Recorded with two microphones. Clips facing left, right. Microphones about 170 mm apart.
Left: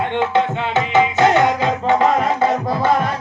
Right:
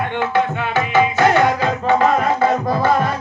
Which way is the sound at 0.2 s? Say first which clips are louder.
Left 1 dB; 20° left (ahead or behind).